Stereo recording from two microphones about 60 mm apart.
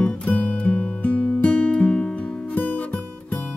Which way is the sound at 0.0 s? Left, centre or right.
Left.